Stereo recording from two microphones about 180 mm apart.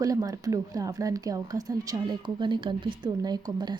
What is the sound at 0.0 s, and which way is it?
Speech, 20° right (ahead or behind).